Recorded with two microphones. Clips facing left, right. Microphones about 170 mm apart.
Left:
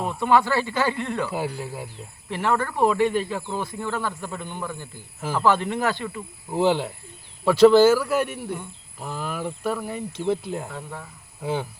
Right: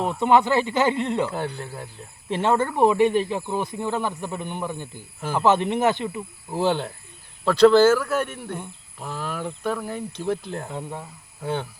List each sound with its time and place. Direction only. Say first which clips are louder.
0.0 s speech: right 2 dB; 20° right (ahead or behind)
1.3 s speech: left 1 dB; 5° left (ahead or behind)
2.3 s speech: right 3 dB; 25° right (ahead or behind)
6.5 s speech: left 2 dB; centre (ahead or behind)
10.7 s speech: right 3 dB; 20° right (ahead or behind)
11.4 s speech: left 1 dB; 5° left (ahead or behind)